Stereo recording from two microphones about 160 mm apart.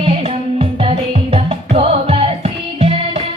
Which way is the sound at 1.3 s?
35° right (ahead or behind).